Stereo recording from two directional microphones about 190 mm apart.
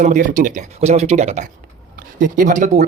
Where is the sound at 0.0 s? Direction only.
45° right (ahead or behind).